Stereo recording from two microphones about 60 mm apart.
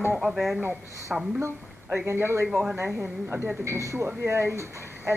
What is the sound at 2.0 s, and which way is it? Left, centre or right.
Speech, right.